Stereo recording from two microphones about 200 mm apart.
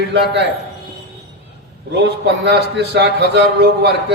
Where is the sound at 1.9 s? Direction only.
55° right (ahead or behind).